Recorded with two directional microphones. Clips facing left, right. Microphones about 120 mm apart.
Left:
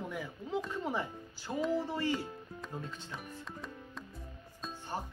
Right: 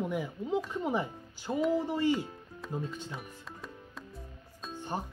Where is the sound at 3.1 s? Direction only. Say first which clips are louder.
Even; centre (ahead or behind).